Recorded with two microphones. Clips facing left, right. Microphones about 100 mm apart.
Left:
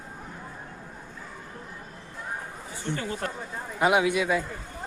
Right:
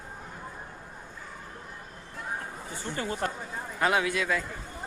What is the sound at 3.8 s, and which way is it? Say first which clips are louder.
Speech: left 4 dB; 15° left (ahead or behind).